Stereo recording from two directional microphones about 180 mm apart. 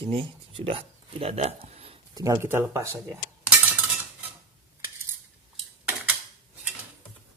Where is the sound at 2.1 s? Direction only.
20° right (ahead or behind).